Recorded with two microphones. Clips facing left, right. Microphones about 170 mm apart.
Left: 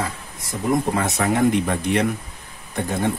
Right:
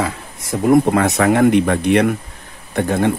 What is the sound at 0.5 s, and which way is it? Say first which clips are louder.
Speech: right 8 dB; 65° right (ahead or behind).